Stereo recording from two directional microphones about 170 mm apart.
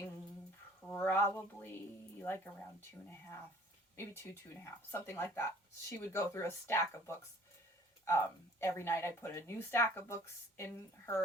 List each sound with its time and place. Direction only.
0.8 s a sound: 15° left (ahead or behind)
2.1 s speech: 10° left (ahead or behind)
3.9 s speech: 15° left (ahead or behind)